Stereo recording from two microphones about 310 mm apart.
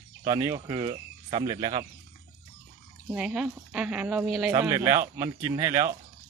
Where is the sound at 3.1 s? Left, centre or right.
Centre.